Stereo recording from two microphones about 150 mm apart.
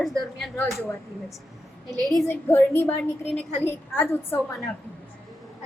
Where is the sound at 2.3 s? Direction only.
15° left (ahead or behind).